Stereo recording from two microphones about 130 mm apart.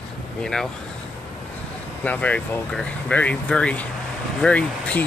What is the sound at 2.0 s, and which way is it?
Speech, 10° left (ahead or behind).